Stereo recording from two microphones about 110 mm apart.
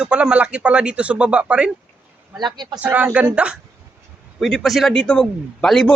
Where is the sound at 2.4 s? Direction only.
40° right (ahead or behind).